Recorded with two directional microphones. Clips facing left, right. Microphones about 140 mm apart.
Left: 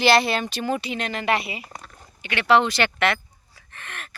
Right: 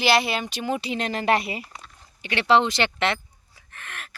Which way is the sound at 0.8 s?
30° right (ahead or behind).